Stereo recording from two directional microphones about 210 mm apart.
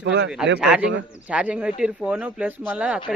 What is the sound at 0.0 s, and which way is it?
Speech, 60° right (ahead or behind).